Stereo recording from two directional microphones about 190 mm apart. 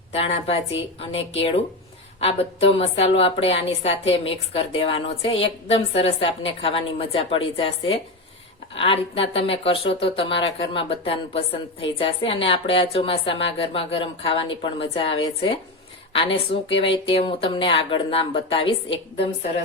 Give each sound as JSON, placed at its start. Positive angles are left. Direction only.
{"t": 0.1, "sound": "a woman's voice", "side_deg": 30}
{"t": 16.1, "sound": "a woman's voice", "side_deg": 30}